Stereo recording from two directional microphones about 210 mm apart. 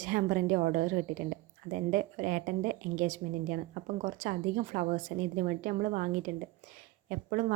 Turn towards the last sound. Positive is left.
turn(degrees=-40)  # may be behind; listen again after turning